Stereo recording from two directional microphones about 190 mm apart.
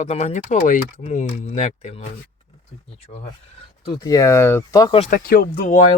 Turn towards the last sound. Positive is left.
turn(degrees=40)  # may be behind; listen again after turning